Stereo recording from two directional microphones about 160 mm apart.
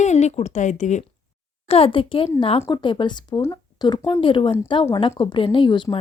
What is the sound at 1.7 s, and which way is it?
Speech, 35° left (ahead or behind).